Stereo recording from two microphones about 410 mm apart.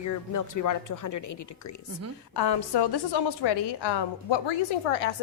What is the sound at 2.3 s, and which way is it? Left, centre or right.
A woman's voice, left.